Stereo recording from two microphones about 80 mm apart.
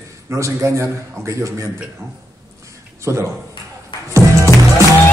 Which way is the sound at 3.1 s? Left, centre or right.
Right.